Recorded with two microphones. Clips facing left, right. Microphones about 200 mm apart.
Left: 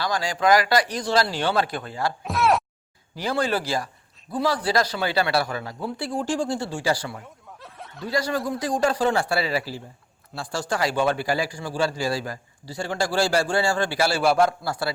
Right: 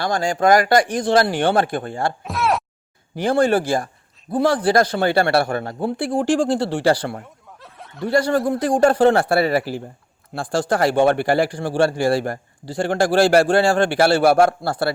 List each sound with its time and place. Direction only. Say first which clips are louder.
0.0 s speech: right 5 dB; 50° right (ahead or behind)
2.2 s a sound: left 3 dB; centre (ahead or behind)
3.2 s speech: right 8 dB; 50° right (ahead or behind)
7.2 s snicker: right 2 dB; centre (ahead or behind)
8.0 s speech: right 7 dB; 55° right (ahead or behind)